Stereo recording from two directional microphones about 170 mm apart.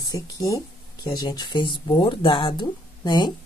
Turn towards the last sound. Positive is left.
turn(degrees=25)  # may be behind; listen again after turning